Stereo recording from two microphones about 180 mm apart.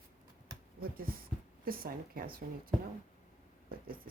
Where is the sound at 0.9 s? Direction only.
55° right (ahead or behind).